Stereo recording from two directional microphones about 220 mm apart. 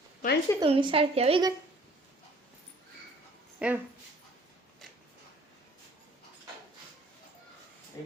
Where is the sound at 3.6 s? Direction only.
5° right (ahead or behind).